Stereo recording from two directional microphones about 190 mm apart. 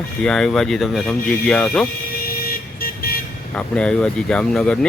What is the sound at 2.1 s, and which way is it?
Vehicle, 50° left (ahead or behind).